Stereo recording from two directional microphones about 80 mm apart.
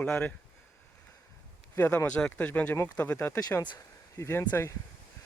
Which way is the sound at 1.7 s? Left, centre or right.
Left.